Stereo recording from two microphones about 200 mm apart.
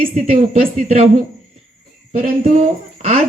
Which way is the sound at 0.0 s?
30° right (ahead or behind).